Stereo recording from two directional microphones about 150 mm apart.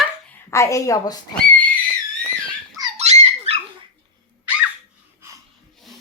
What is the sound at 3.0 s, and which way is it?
Dog, 45° right (ahead or behind).